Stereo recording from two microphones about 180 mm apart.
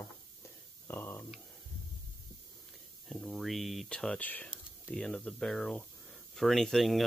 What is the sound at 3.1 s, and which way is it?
Speech, centre (ahead or behind).